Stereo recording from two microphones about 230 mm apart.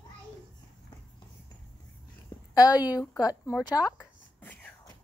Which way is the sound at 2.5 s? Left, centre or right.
Centre.